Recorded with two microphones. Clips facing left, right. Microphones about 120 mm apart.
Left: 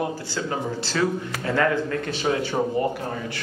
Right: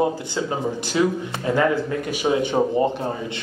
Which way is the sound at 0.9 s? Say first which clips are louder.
Right 3 dB; 15° right (ahead or behind).